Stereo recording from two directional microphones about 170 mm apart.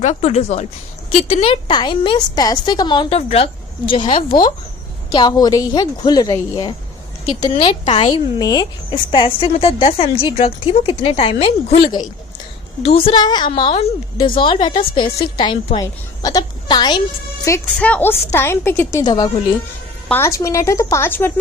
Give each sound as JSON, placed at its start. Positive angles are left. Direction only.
{"t": 0.0, "sound": "a woman's voice", "side_deg": 40}
{"t": 3.2, "sound": "speech", "side_deg": 35}
{"t": 4.3, "sound": "speech", "side_deg": 55}
{"t": 5.1, "sound": "a woman's voice", "side_deg": 25}
{"t": 8.4, "sound": "a woman's voice", "side_deg": 20}
{"t": 17.7, "sound": "a woman's voice", "side_deg": 10}
{"t": 20.1, "sound": "a woman's voice", "side_deg": 10}